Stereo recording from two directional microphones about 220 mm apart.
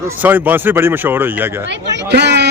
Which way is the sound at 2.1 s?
50° right (ahead or behind).